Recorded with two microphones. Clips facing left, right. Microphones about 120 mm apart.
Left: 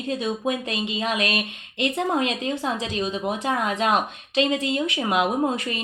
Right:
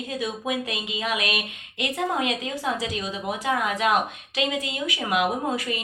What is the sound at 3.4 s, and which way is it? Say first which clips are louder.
Speech: right 1 dB; 30° left (ahead or behind).